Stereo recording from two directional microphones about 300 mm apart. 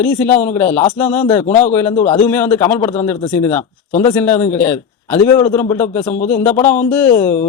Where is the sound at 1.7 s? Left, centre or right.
Centre.